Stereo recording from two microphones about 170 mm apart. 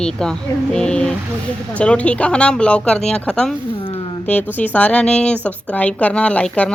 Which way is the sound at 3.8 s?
30° left (ahead or behind).